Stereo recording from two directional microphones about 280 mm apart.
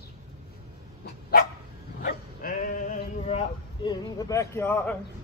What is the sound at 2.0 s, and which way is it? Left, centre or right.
Sheep, left.